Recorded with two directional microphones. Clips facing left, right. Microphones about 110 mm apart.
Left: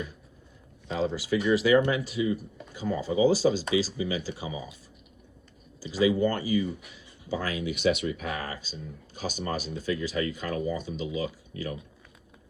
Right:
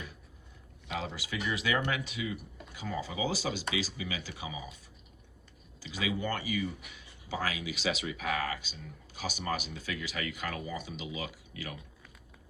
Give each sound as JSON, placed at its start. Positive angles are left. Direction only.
{"t": 0.9, "sound": "speech", "side_deg": 30}
{"t": 5.9, "sound": "speech", "side_deg": 35}
{"t": 7.4, "sound": "speech", "side_deg": 50}
{"t": 8.3, "sound": "speech", "side_deg": 35}